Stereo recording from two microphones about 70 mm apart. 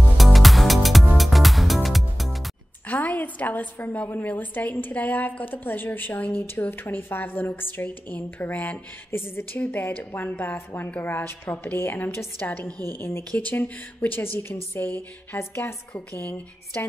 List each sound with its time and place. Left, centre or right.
0.2 s music: centre
2.9 s a woman's voice: left
15.3 s a woman's voice: left